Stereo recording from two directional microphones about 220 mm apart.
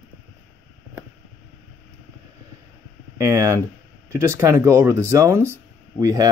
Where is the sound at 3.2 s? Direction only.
15° right (ahead or behind).